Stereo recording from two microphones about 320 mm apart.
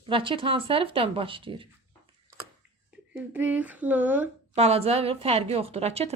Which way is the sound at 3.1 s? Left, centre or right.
Centre.